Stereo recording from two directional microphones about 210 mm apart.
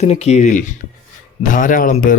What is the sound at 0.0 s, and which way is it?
Speech, 30° left (ahead or behind).